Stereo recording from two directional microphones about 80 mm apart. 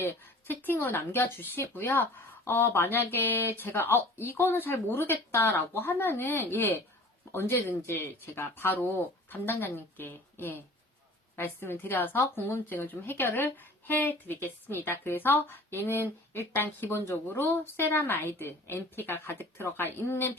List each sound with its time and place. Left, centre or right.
0.0 s speech: left